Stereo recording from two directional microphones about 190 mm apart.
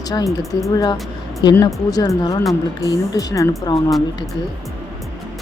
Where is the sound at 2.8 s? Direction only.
15° left (ahead or behind).